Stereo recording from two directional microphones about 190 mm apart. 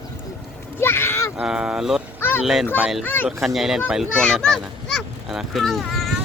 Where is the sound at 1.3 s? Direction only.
5° right (ahead or behind).